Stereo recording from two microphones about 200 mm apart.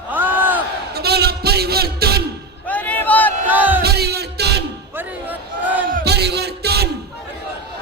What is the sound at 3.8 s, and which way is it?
Music, 55° right (ahead or behind).